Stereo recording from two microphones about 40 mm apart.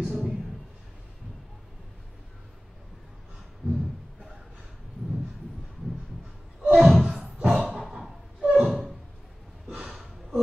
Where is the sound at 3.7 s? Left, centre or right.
Right.